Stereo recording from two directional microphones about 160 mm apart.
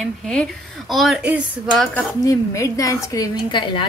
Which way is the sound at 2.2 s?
20° left (ahead or behind).